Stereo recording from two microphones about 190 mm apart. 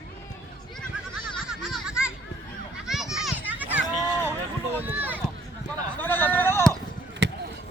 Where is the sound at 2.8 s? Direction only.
Centre (ahead or behind).